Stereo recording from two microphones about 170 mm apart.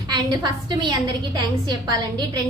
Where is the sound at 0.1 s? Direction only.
25° right (ahead or behind).